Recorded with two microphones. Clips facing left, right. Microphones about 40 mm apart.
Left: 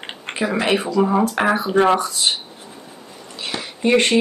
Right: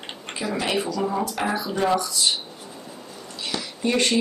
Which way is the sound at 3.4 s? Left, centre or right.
Left.